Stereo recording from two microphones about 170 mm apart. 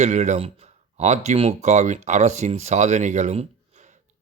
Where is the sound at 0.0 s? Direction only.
45° right (ahead or behind).